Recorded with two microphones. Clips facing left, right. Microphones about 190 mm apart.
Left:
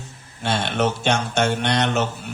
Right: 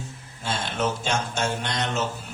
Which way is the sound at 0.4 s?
70° left (ahead or behind).